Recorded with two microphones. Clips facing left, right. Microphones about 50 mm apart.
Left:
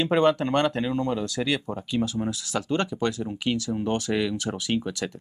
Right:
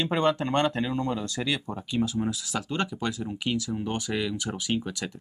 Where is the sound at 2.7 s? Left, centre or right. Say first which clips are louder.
Left 5 dB; centre.